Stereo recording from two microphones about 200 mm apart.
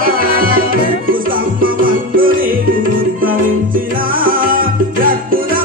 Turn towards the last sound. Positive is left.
turn(degrees=-45)  # may be behind; listen again after turning